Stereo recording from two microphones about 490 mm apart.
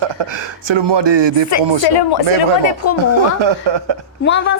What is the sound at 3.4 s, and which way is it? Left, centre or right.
Speech, right.